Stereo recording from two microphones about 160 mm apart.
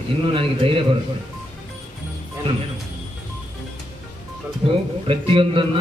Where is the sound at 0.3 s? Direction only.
35° right (ahead or behind).